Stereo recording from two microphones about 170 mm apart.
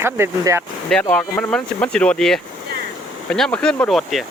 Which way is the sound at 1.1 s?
5° left (ahead or behind).